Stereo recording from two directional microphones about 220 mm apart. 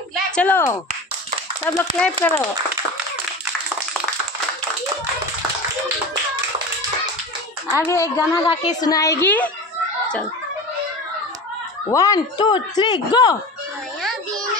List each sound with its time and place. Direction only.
0.1 s a sound: 5° left (ahead or behind)
2.0 s speech: 5° left (ahead or behind)
7.7 s speech: 15° left (ahead or behind)
11.9 s speech: 15° left (ahead or behind)